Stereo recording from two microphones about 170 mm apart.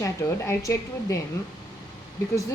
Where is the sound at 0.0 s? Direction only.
15° left (ahead or behind).